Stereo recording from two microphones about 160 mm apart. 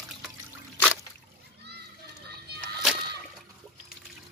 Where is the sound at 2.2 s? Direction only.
90° right.